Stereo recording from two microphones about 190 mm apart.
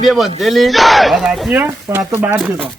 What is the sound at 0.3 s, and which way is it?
Speech, centre (ahead or behind).